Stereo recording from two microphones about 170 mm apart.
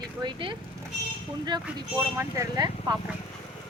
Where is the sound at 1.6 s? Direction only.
15° right (ahead or behind).